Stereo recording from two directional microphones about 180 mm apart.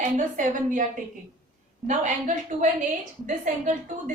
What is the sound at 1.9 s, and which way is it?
A woman's voice, 45° right (ahead or behind).